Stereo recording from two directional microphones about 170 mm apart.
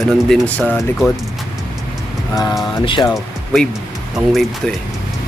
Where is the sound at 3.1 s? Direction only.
Centre (ahead or behind).